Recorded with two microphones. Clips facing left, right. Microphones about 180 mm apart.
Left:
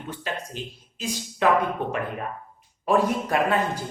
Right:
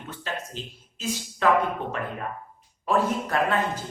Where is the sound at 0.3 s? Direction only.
15° left (ahead or behind).